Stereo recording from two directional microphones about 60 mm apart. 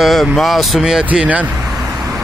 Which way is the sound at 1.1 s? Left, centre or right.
Right.